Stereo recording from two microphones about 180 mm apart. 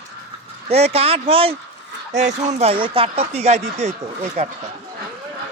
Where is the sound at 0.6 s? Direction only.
35° right (ahead or behind).